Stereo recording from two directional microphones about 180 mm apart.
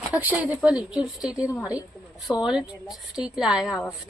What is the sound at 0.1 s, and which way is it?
A woman's voice, 10° right (ahead or behind).